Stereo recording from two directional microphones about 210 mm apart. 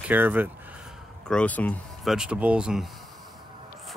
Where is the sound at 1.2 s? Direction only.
5° left (ahead or behind).